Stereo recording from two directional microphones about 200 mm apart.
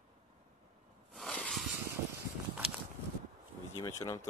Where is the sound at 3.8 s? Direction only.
15° left (ahead or behind).